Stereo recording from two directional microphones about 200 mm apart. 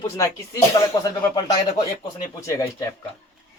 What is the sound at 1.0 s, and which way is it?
Speech, 20° left (ahead or behind).